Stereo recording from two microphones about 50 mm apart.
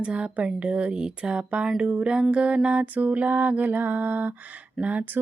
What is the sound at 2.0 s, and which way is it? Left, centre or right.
Music, centre.